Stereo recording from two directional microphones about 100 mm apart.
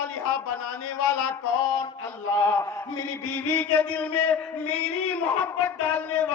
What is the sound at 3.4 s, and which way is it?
Speech, 20° left (ahead or behind).